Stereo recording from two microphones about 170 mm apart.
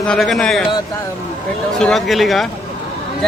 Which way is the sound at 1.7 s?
Centre (ahead or behind).